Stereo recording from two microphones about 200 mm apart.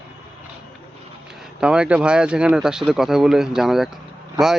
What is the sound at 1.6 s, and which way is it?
Speech, 5° right (ahead or behind).